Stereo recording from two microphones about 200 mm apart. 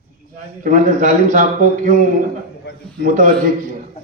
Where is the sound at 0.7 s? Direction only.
40° right (ahead or behind).